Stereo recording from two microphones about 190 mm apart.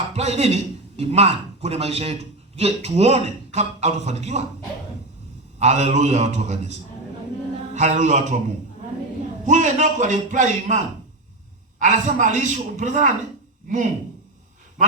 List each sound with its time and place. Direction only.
0.1 s a man's voice: 35° right (ahead or behind)
5.5 s a man's voice: 35° right (ahead or behind)
9.5 s a man's voice: 40° right (ahead or behind)